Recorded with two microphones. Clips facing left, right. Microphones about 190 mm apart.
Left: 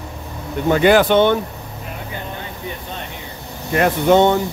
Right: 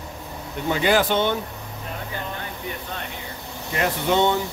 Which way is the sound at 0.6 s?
55° left (ahead or behind).